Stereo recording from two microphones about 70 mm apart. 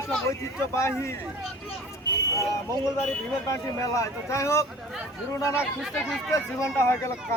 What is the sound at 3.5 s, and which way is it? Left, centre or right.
Speech, left.